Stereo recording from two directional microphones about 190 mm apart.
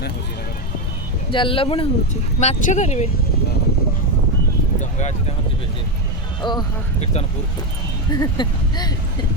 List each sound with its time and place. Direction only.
1.3 s speech: 25° left (ahead or behind)
2.4 s speech: 40° left (ahead or behind)
4.8 s a sound: 40° left (ahead or behind)
6.4 s speech: 25° left (ahead or behind)
7.0 s speech: 35° left (ahead or behind)
8.1 s speech: 20° left (ahead or behind)